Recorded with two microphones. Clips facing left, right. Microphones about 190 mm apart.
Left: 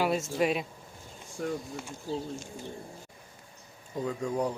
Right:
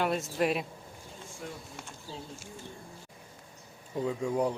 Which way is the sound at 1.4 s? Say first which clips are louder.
Left 11 dB; 55° left (ahead or behind).